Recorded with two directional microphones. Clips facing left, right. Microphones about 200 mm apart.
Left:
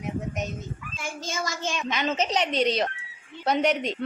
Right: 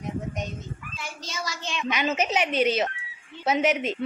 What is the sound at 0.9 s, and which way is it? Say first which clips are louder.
Speech: left 5 dB; 50° left (ahead or behind).